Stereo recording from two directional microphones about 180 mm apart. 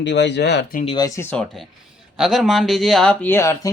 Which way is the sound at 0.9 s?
20° left (ahead or behind).